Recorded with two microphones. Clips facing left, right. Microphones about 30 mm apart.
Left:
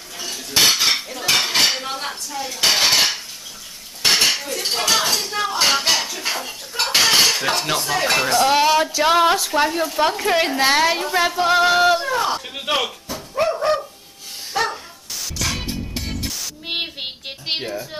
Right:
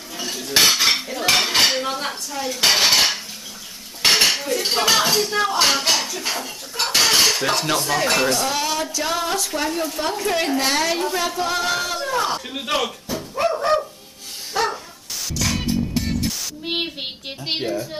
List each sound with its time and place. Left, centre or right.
0.2 s cutlery: centre
4.6 s speech: centre
8.4 s a woman's voice: left
9.7 s a woman's voice: centre
12.1 s speech: centre
14.5 s bow-wow: centre
15.2 s music: centre